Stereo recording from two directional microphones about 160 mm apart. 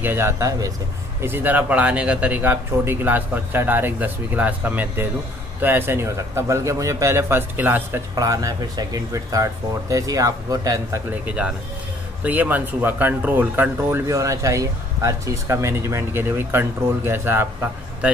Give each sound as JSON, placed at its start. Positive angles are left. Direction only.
{"t": 0.0, "sound": "speech", "side_deg": -15}
{"t": 11.2, "sound": "speech", "side_deg": -5}